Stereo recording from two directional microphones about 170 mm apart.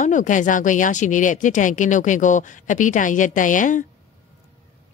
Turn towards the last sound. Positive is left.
turn(degrees=50)  # may be behind; listen again after turning